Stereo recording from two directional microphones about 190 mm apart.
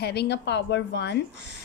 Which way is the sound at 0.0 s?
60° left (ahead or behind).